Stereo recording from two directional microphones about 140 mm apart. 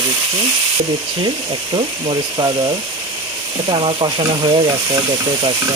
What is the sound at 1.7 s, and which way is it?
Speech, 35° right (ahead or behind).